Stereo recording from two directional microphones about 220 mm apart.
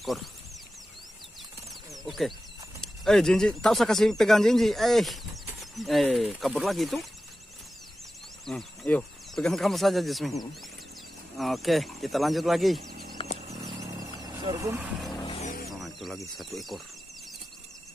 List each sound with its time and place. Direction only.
0.0 s speech: centre (ahead or behind)
2.0 s speech: centre (ahead or behind)
8.5 s speech: 5° left (ahead or behind)
12.9 s a sound: 45° right (ahead or behind)
13.7 s vehicle: 15° right (ahead or behind)
15.2 s vehicle: 30° left (ahead or behind)
15.7 s a sound: centre (ahead or behind)